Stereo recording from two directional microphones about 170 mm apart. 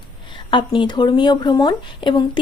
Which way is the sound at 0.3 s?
30° left (ahead or behind).